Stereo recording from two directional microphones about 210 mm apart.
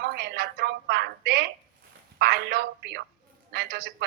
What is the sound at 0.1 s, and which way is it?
A woman's voice, 50° right (ahead or behind).